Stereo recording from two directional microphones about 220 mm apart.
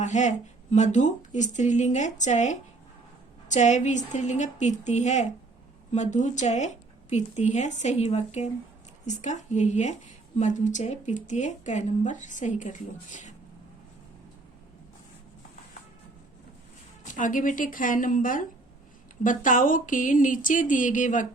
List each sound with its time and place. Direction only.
0.0 s speech: 35° left (ahead or behind)
17.0 s speech: 35° left (ahead or behind)